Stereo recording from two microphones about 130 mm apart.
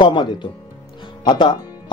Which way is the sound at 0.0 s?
35° left (ahead or behind).